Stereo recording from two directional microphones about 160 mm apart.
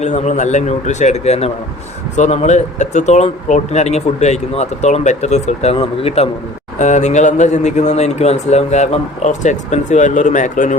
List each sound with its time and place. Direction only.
0.0 s speech: 45° left (ahead or behind)